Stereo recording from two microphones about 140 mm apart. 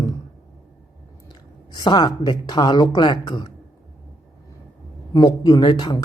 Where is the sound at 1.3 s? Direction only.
30° left (ahead or behind).